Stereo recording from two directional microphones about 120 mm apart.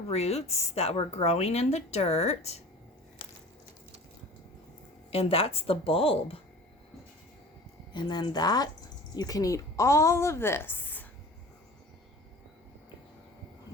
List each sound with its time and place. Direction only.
0.1 s speech: 60° left (ahead or behind)
5.1 s speech: 55° left (ahead or behind)
7.9 s a woman's voice: 35° left (ahead or behind); by 11.0 s 15° left (ahead or behind)